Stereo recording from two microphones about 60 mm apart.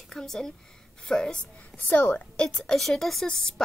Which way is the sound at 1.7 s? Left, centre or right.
Left.